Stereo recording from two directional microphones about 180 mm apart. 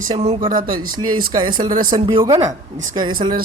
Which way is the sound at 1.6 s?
50° right (ahead or behind).